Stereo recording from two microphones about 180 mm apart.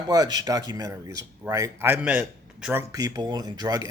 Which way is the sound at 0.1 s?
20° right (ahead or behind).